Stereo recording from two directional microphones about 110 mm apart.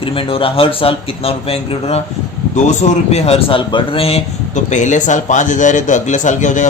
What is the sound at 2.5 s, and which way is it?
A man's voice, 90° left.